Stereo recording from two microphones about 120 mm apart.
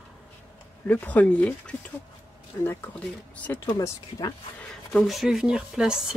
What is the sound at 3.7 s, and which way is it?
Speech, 30° left (ahead or behind).